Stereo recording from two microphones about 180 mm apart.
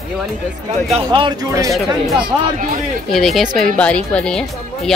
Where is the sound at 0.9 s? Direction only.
25° right (ahead or behind).